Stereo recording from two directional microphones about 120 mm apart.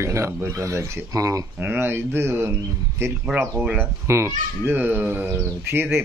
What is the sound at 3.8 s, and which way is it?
Speech, 20° right (ahead or behind).